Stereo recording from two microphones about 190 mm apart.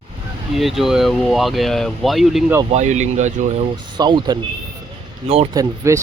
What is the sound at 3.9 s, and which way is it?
Speech, 25° right (ahead or behind).